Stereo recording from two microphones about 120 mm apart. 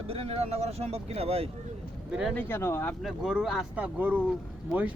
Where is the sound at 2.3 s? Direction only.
20° left (ahead or behind).